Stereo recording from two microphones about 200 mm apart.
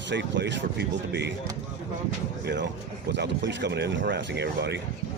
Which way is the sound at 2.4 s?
60° right (ahead or behind).